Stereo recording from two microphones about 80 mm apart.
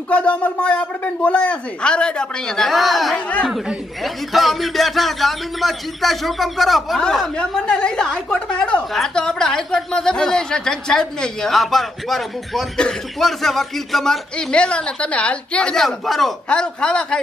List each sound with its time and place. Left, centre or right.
0.1 s a woman's voice: centre